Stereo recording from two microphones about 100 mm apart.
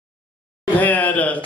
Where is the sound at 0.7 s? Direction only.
15° left (ahead or behind).